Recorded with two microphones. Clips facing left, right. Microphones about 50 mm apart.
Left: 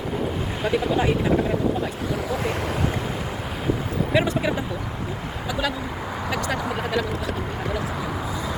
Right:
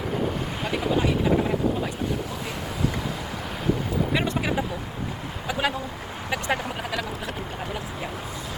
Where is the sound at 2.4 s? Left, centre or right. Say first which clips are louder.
Left 6 dB; left.